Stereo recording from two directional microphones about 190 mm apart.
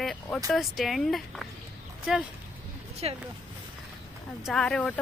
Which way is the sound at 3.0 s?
30° right (ahead or behind).